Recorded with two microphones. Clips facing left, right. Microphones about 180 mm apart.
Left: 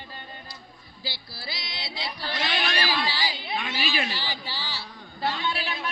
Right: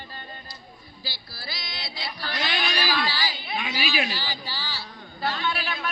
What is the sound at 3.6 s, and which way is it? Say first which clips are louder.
Speech: right 3 dB; 5° right (ahead or behind).